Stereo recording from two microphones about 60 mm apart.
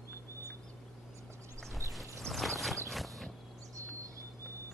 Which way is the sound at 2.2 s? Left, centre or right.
Centre.